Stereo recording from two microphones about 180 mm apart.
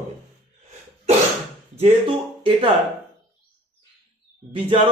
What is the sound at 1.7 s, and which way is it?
Speech, 30° right (ahead or behind).